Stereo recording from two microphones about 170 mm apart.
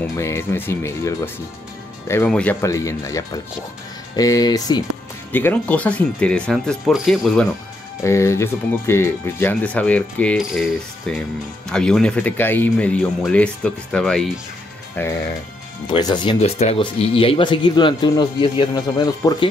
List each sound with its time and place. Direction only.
0.0 s speech: 15° left (ahead or behind)
2.6 s speech: 20° left (ahead or behind)
5.3 s speech: 10° left (ahead or behind)
8.0 s speech: 15° left (ahead or behind)
15.9 s speech: 25° left (ahead or behind)